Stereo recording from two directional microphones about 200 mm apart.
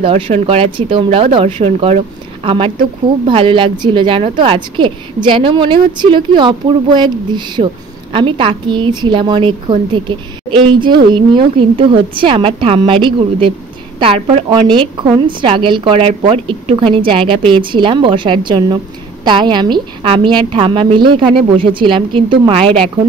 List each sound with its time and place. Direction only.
0.0 s a woman's voice: 30° right (ahead or behind)